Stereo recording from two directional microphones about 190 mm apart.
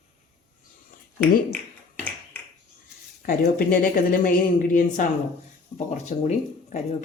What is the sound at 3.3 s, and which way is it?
Speech, 50° left (ahead or behind).